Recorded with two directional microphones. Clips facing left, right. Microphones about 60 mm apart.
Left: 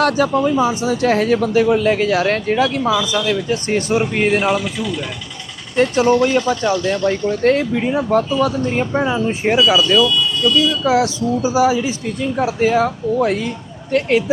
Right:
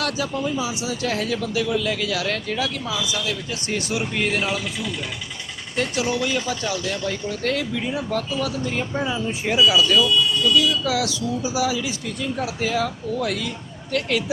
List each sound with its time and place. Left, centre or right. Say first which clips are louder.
0.0 s speech: left 10 dB; left
5.7 s speech: left 10 dB; left